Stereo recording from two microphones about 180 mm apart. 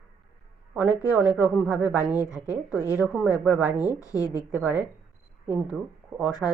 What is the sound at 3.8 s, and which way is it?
Speech, 20° left (ahead or behind).